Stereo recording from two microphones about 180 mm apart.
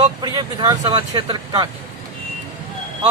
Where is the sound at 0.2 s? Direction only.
25° right (ahead or behind).